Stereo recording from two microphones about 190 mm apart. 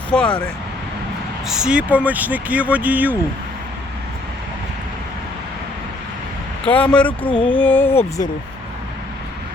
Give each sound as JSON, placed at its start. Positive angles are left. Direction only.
{"t": 0.1, "sound": "speech", "side_deg": 5}
{"t": 1.5, "sound": "speech", "side_deg": -5}
{"t": 6.7, "sound": "speech", "side_deg": 5}
{"t": 7.3, "sound": "a sound", "side_deg": 25}
{"t": 7.6, "sound": "speech", "side_deg": 10}